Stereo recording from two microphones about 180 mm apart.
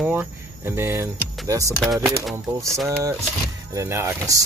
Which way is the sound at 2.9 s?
15° right (ahead or behind).